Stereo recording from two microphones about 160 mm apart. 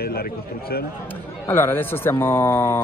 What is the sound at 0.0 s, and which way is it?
Speech, 75° left (ahead or behind).